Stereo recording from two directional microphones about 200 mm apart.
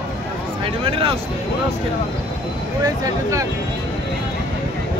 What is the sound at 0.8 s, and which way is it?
Speech, 25° right (ahead or behind).